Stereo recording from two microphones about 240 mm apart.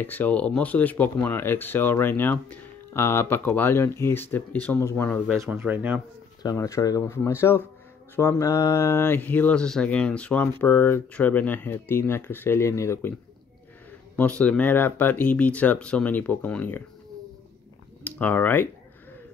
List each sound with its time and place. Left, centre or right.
0.0 s speech: centre
5.4 s speech: centre
6.4 s speech: centre
14.1 s speech: centre
18.0 s speech: centre